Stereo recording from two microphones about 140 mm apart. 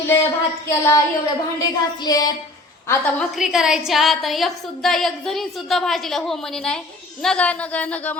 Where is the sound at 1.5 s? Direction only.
25° left (ahead or behind).